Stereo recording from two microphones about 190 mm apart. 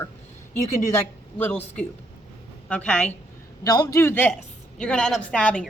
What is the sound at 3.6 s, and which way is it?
A woman's voice, 20° left (ahead or behind).